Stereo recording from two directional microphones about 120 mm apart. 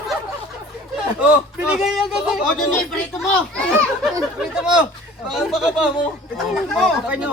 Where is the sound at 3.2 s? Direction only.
10° left (ahead or behind).